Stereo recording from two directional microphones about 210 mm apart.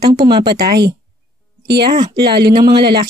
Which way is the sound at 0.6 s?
50° right (ahead or behind).